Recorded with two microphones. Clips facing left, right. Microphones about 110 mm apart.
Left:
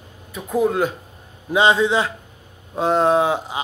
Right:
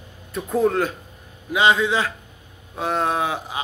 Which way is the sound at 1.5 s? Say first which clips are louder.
Left 2 dB; 25° left (ahead or behind).